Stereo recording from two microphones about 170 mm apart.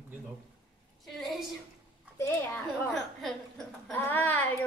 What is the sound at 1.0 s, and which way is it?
Speech, centre (ahead or behind).